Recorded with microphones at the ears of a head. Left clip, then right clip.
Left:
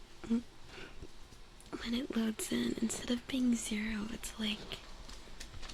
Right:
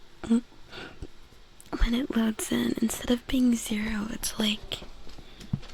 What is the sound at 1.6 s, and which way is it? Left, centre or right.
Speech, right.